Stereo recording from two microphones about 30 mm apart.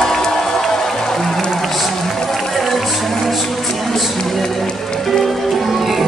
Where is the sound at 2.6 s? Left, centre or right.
Centre.